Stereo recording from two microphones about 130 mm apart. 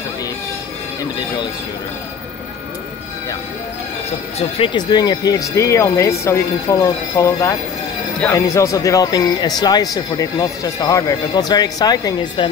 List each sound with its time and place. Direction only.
4.4 s speech: 40° left (ahead or behind)